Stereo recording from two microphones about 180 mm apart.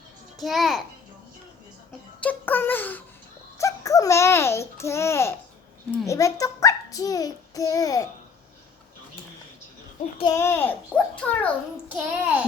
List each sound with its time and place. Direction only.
0.3 s a child's voice: centre (ahead or behind)
2.2 s a child's voice: 10° left (ahead or behind)
3.6 s babbling: 20° left (ahead or behind)
6.1 s a child's voice: 20° left (ahead or behind)
10.3 s a child's voice: 15° left (ahead or behind)
11.9 s a child's voice: 10° right (ahead or behind)